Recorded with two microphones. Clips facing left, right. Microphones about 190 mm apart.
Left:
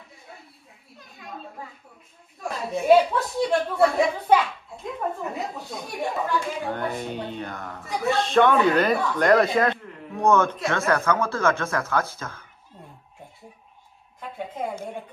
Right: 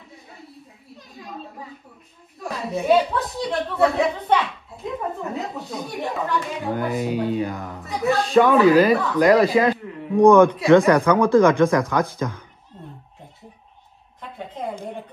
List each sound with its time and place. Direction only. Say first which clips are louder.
2.4 s speech: right 1 dB; centre (ahead or behind)
10.1 s speech: right 8 dB; 15° right (ahead or behind)